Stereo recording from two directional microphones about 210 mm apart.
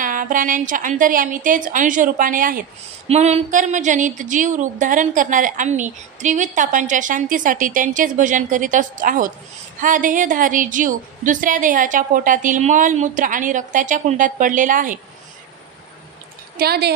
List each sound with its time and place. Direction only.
0.0 s a woman's voice: 40° right (ahead or behind)
16.5 s a woman's voice: 50° right (ahead or behind)